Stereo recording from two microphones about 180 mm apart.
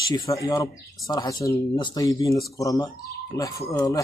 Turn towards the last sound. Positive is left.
turn(degrees=20)  # may be behind; listen again after turning